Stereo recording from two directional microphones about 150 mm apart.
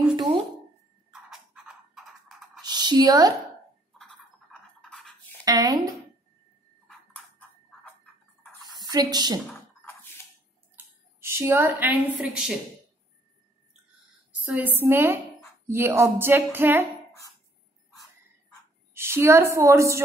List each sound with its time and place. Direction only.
0.1 s a sound: 30° right (ahead or behind)
1.3 s music: 5° right (ahead or behind)
2.6 s music: 30° right (ahead or behind)
4.0 s toothbrush: 5° left (ahead or behind)
5.4 s speech: 25° right (ahead or behind)
6.9 s a sound: 10° left (ahead or behind)
8.8 s a woman's voice: 25° right (ahead or behind)
9.5 s drip: 15° left (ahead or behind)
10.8 s speech: 15° right (ahead or behind)
14.4 s speech: 10° right (ahead or behind)
18.9 s speech: 15° right (ahead or behind)